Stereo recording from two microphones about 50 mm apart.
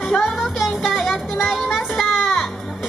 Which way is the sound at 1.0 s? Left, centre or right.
Centre.